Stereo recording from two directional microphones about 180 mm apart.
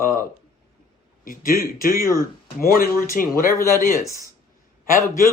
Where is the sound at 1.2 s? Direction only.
50° left (ahead or behind).